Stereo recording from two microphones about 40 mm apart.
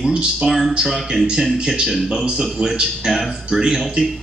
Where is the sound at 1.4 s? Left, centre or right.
Centre.